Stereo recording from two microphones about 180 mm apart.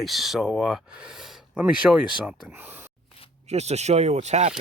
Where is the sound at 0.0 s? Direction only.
Centre (ahead or behind).